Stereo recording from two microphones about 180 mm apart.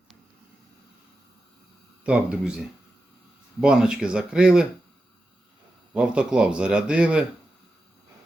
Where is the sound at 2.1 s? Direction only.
5° right (ahead or behind).